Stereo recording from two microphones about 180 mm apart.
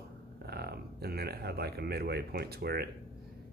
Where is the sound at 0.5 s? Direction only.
60° right (ahead or behind).